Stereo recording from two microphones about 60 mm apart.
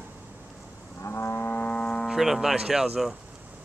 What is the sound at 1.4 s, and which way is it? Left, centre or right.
Vehicle, left.